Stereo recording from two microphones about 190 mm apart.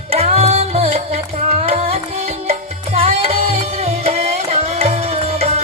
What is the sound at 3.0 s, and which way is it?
Music, 30° right (ahead or behind).